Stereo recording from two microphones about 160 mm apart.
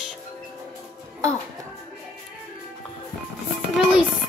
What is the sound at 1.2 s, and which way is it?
Speech, 20° right (ahead or behind).